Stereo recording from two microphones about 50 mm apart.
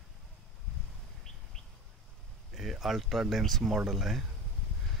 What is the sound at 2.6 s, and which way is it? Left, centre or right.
Speech, centre.